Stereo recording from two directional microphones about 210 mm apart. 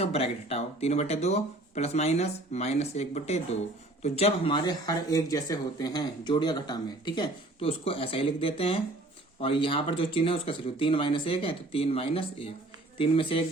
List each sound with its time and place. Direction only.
0.0 s speech: 30° left (ahead or behind)